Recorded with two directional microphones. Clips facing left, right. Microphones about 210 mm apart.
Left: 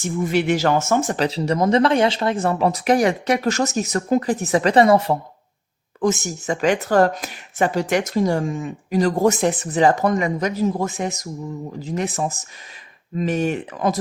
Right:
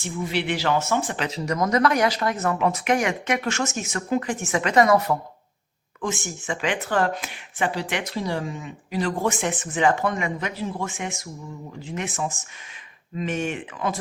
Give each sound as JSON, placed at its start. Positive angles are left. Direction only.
{"t": 0.0, "sound": "speech", "side_deg": 45}
{"t": 6.0, "sound": "speech", "side_deg": 40}